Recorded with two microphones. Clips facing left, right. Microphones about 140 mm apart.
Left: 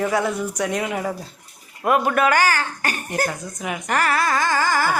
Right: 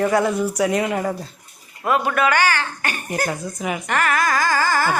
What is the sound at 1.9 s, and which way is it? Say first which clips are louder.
A man's voice: left 1 dB; 45° left (ahead or behind).